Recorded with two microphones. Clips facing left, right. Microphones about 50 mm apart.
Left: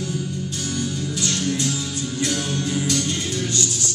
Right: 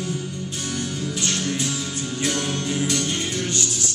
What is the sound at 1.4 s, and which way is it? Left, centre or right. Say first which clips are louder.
Music: left 2 dB; centre.